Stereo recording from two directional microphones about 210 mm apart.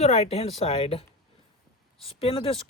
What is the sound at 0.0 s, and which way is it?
Speech, 30° left (ahead or behind).